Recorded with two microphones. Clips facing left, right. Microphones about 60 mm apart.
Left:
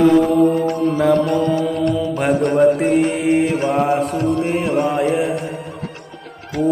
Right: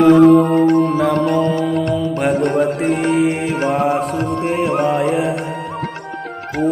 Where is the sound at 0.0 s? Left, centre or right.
Right.